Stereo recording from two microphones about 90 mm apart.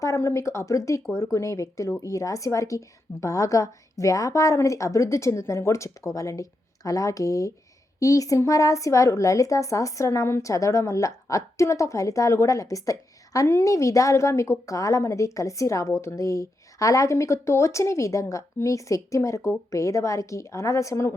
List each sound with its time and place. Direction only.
0.0 s speech: 35° left (ahead or behind)